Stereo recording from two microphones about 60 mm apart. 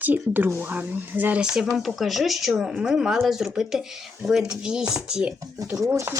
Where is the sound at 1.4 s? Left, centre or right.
Centre.